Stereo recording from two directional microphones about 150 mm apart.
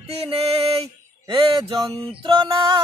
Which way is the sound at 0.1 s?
40° right (ahead or behind).